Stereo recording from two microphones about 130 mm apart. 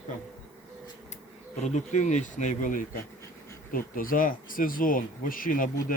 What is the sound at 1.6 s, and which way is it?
Speech, 65° left (ahead or behind).